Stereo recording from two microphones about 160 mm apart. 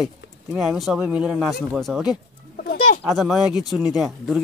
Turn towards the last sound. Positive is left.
turn(degrees=0)  # may be behind; listen again after turning